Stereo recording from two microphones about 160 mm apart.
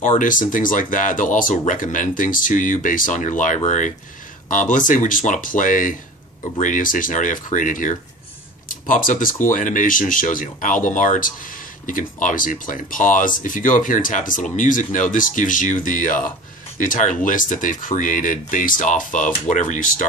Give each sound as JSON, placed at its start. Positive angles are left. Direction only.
{"t": 0.2, "sound": "speech", "side_deg": 55}